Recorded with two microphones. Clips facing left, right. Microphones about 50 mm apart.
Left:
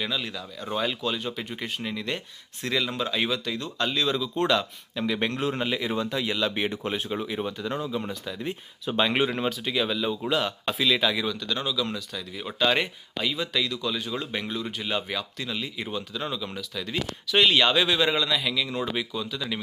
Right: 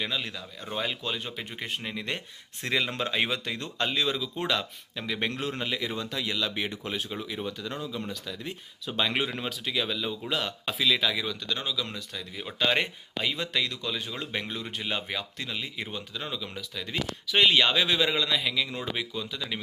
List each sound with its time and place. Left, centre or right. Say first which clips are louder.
0.0 s speech: left 2 dB; centre
4.1 s speech: left 5 dB; centre
5.5 s speech: left 4 dB; centre
6.5 s speech: left 4 dB; left
9.5 s speech: left 4 dB; centre
11.6 s speech: left 4 dB; centre
16.2 s speech: left 3 dB; centre
16.7 s speech: left 1 dB; centre